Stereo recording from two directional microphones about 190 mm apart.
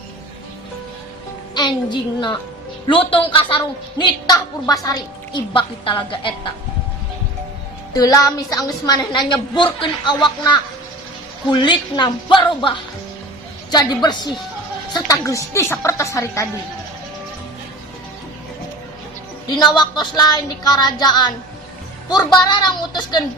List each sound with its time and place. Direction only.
1.5 s a woman's voice: 25° left (ahead or behind)
7.9 s a woman's voice: 20° left (ahead or behind)
19.5 s a woman's voice: 25° left (ahead or behind)
22.2 s speech: 5° left (ahead or behind)
22.4 s a woman's voice: 25° left (ahead or behind)